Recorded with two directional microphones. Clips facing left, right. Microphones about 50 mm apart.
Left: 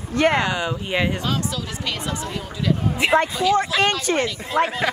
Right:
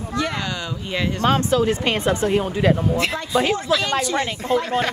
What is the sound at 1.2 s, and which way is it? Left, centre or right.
Speech, right.